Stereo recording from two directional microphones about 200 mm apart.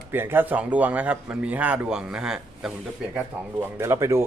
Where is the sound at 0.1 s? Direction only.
10° right (ahead or behind).